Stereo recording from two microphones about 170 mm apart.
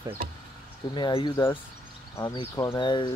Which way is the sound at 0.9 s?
25° left (ahead or behind).